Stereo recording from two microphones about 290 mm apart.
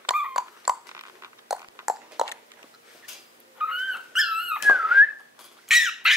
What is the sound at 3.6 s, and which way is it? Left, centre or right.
Dog, centre.